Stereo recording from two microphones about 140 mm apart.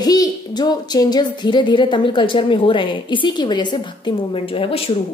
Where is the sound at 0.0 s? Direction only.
30° left (ahead or behind).